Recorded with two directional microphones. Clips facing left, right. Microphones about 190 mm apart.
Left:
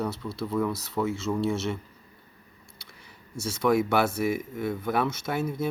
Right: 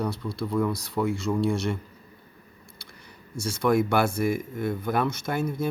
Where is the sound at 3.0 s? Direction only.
5° left (ahead or behind).